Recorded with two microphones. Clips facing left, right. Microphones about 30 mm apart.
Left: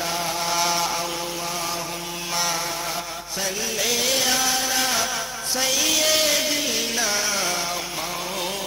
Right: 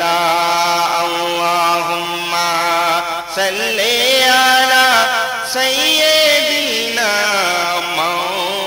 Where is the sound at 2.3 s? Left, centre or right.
Right.